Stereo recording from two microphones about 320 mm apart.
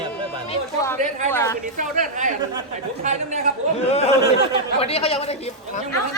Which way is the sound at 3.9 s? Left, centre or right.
Centre.